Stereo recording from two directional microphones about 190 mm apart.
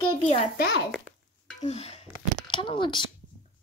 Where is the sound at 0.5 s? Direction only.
60° left (ahead or behind).